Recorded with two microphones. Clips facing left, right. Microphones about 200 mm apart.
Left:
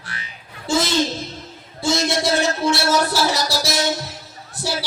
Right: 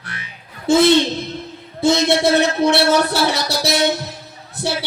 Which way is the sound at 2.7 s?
60° right (ahead or behind).